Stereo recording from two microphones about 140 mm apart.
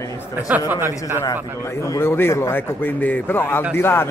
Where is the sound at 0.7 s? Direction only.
20° right (ahead or behind).